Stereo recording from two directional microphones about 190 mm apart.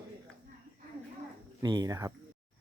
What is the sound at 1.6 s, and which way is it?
Speech, 20° right (ahead or behind).